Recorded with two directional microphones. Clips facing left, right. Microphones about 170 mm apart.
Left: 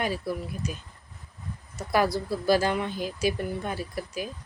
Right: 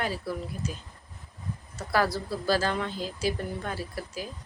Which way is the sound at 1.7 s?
15° left (ahead or behind).